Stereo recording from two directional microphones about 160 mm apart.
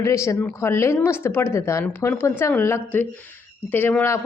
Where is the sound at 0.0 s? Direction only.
20° left (ahead or behind).